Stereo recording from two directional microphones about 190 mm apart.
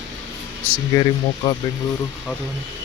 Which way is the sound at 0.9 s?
20° left (ahead or behind).